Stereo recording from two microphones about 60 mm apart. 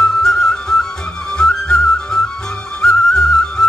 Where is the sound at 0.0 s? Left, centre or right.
Centre.